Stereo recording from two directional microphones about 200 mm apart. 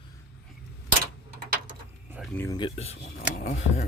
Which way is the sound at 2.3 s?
10° left (ahead or behind).